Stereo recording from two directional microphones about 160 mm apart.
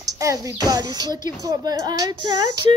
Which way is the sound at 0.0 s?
20° right (ahead or behind).